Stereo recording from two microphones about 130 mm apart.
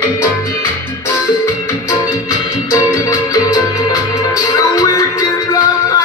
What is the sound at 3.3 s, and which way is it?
Music, 30° left (ahead or behind).